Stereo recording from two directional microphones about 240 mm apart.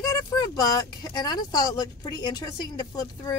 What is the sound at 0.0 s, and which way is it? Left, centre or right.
Speech, centre.